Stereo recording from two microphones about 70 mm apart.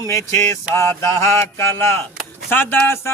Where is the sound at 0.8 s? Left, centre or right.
Left.